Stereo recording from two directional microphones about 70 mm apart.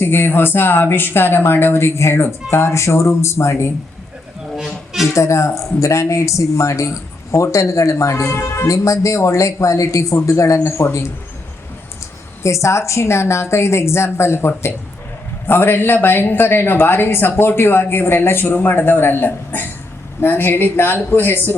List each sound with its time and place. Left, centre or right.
0.0 s speech: left
4.5 s music: centre
5.1 s speech: left
12.4 s speech: left